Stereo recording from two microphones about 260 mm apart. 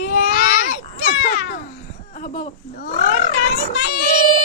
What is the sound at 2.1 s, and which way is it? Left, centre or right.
Speech, left.